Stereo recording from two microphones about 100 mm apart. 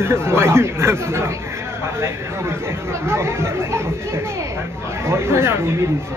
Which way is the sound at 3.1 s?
25° right (ahead or behind).